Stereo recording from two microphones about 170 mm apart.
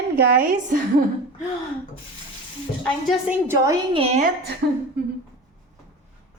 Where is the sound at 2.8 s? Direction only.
Centre (ahead or behind).